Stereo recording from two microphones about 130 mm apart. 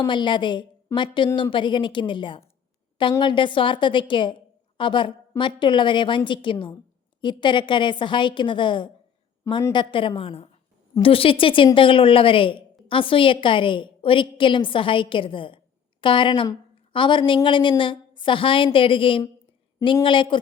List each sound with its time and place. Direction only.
0.1 s a woman's voice: 35° left (ahead or behind)